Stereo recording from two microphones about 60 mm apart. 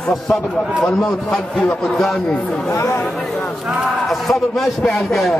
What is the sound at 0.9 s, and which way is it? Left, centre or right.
Speech, centre.